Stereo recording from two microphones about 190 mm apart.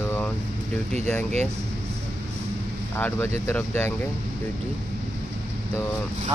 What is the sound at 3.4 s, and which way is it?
Speech, 10° left (ahead or behind).